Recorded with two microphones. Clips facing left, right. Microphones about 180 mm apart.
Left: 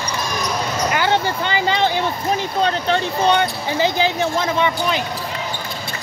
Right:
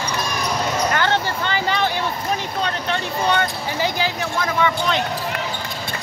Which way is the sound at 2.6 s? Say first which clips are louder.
Left 7 dB; 35° left (ahead or behind).